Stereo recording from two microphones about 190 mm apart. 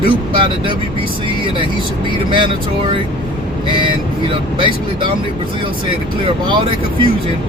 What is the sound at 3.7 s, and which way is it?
Speech, 25° right (ahead or behind).